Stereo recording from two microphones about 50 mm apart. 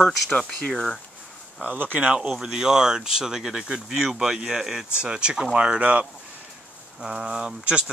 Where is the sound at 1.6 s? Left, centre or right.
Right.